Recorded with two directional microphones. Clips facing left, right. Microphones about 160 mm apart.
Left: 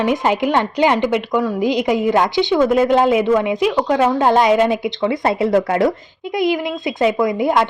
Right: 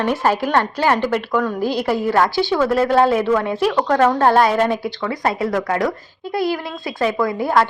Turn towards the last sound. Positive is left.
turn(degrees=20)  # may be behind; listen again after turning